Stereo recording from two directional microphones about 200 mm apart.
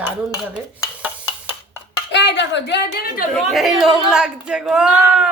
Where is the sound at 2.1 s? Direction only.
60° left (ahead or behind).